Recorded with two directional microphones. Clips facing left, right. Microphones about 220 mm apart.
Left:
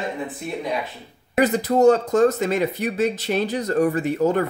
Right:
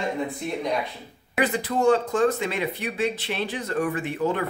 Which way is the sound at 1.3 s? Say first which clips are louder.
Left 6 dB; 40° left (ahead or behind).